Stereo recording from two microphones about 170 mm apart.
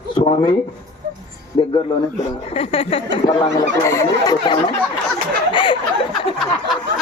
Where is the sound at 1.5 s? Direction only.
30° left (ahead or behind).